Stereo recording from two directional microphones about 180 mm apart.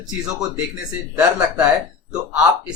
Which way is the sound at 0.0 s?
Centre (ahead or behind).